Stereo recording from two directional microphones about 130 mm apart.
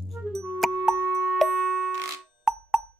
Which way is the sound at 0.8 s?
Centre (ahead or behind).